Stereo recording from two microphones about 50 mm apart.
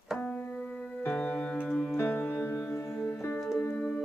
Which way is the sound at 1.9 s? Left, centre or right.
Left.